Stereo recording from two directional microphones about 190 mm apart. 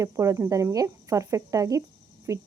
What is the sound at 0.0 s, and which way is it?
Speech, 15° right (ahead or behind).